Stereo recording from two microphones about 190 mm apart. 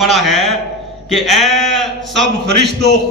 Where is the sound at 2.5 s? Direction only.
60° right (ahead or behind).